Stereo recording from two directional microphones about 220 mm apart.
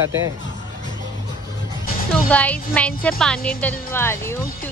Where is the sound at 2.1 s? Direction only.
5° left (ahead or behind).